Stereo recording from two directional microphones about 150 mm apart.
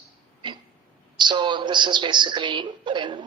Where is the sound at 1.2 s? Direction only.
30° right (ahead or behind).